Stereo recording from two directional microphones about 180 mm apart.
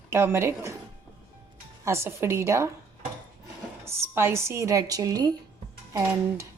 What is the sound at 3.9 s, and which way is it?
Speech, 15° right (ahead or behind).